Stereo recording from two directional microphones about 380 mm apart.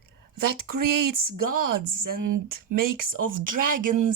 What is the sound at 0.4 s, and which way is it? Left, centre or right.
Speech, right.